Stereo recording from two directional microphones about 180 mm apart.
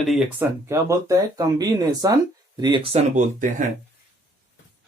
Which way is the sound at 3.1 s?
45° right (ahead or behind).